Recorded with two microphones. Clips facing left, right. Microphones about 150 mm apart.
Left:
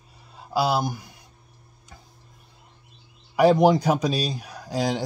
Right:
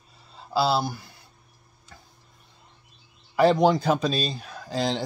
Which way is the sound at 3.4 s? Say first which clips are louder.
Left 2 dB; 15° left (ahead or behind).